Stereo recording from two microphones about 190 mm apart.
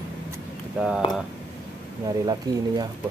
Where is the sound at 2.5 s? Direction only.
20° right (ahead or behind).